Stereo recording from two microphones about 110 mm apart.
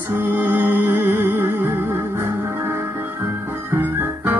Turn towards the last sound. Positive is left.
turn(degrees=-20)  # may be behind; listen again after turning